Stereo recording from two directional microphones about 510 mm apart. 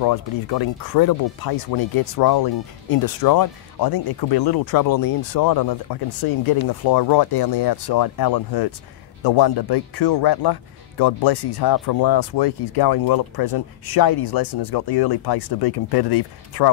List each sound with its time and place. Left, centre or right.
0.0 s speech: left